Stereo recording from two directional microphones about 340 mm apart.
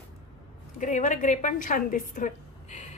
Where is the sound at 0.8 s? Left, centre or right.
Left.